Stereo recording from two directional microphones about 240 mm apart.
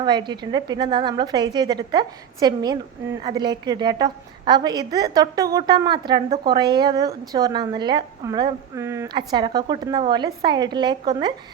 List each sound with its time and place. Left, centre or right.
0.0 s a woman's voice: centre